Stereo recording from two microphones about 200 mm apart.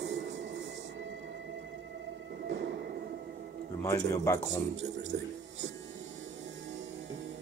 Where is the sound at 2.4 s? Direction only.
60° right (ahead or behind).